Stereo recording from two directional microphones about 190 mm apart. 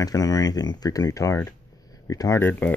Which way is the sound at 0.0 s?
20° left (ahead or behind).